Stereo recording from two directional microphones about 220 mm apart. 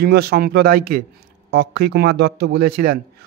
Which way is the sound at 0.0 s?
45° right (ahead or behind).